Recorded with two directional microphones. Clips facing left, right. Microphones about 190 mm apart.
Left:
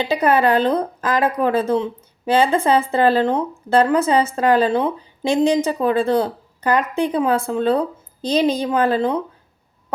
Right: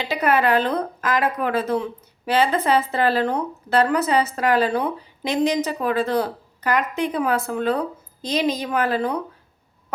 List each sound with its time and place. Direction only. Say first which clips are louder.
0.1 s speech: left 2 dB; 30° left (ahead or behind)